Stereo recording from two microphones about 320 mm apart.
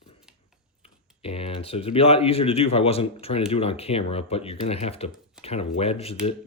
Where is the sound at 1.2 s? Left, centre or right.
Centre.